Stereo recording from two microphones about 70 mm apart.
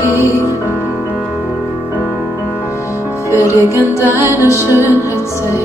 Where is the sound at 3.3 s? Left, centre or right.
Left.